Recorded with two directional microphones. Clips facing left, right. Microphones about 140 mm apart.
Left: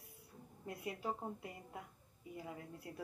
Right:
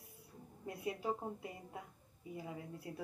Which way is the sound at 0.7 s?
20° right (ahead or behind).